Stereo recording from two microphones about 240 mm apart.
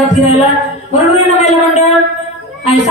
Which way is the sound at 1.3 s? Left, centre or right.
Left.